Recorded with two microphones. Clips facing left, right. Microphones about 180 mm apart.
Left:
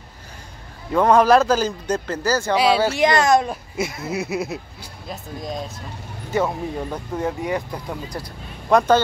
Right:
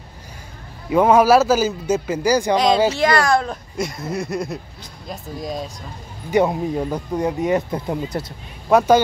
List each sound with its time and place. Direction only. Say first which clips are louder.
0.8 s speech: right 2 dB; 10° right (ahead or behind)
2.5 s speech: left 1 dB; 5° left (ahead or behind)
2.9 s speech: left 1 dB; 20° left (ahead or behind)
3.4 s speech: even; 5° left (ahead or behind)
6.3 s speech: right 5 dB; 15° right (ahead or behind)
8.6 s speech: right 2 dB; 10° right (ahead or behind)